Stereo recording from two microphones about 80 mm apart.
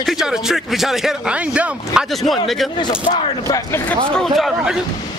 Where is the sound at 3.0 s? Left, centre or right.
Left.